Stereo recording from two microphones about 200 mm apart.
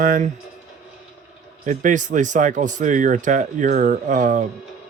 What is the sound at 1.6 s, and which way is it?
Speech, 40° right (ahead or behind).